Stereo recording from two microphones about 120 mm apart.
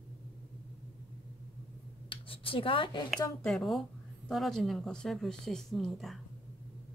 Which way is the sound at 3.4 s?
5° left (ahead or behind).